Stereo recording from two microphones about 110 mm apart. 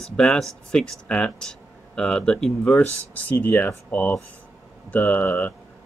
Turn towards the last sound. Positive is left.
turn(degrees=15)  # may be behind; listen again after turning